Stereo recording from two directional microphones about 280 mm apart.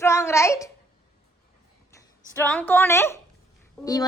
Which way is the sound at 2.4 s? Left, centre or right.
Centre.